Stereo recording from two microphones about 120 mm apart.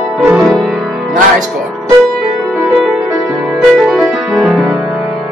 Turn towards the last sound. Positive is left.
turn(degrees=-5)  # may be behind; listen again after turning